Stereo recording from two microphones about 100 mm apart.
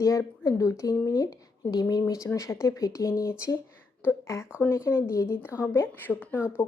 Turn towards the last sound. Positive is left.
turn(degrees=20)  # may be behind; listen again after turning